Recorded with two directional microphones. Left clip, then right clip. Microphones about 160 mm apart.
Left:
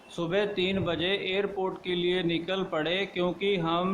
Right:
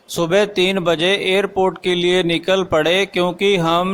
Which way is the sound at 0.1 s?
55° right (ahead or behind).